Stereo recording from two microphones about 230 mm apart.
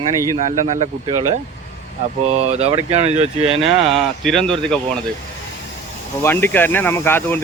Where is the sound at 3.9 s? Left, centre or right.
Centre.